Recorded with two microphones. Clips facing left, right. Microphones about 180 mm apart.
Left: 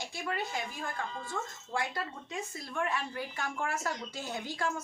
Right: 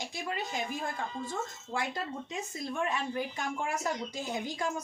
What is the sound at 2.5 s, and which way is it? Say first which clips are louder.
A woman's voice: right 2 dB; 20° right (ahead or behind).